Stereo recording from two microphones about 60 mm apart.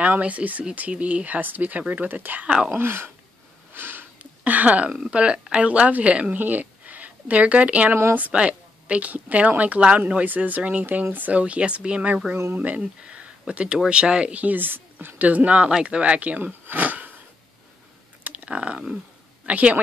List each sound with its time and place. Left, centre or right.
0.0 s speech: right
2.4 s speech: centre
2.7 s speech: right
3.7 s sniff: right
4.2 s a sound: right
4.9 s speech: centre
6.3 s speech: right
7.9 s speech: right
8.2 s speech: centre
18.2 s a sound: right
19.4 s a woman's voice: right